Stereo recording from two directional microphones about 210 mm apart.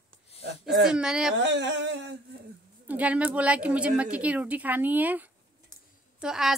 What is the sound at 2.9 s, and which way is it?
A woman's voice, 5° right (ahead or behind).